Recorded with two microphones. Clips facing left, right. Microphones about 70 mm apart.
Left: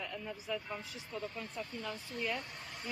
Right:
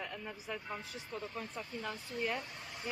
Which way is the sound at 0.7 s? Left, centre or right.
Centre.